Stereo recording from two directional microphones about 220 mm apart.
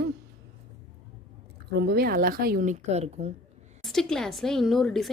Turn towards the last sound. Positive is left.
turn(degrees=0)  # may be behind; listen again after turning